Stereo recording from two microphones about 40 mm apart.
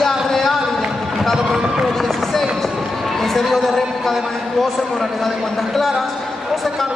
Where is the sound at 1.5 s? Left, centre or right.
Right.